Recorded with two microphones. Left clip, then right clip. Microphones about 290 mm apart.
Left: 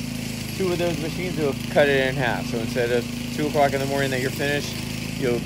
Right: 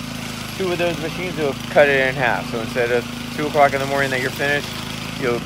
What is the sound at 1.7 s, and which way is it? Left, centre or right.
Speech, right.